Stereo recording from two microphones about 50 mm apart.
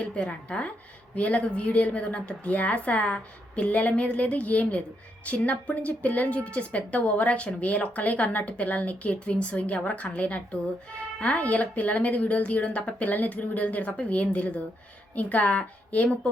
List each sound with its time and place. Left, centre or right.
0.0 s a woman's voice: left